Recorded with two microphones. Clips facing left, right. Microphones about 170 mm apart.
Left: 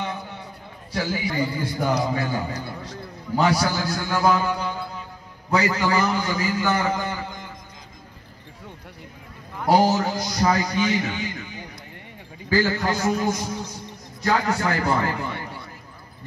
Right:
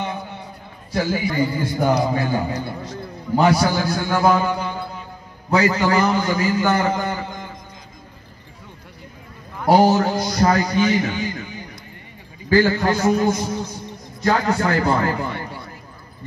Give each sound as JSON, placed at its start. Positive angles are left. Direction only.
{"t": 0.9, "sound": "a man's voice", "side_deg": -50}
{"t": 9.7, "sound": "a man's voice", "side_deg": -55}
{"t": 12.4, "sound": "a man's voice", "side_deg": -60}